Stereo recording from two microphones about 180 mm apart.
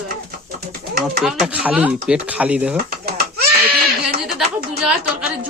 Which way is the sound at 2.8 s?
60° right (ahead or behind).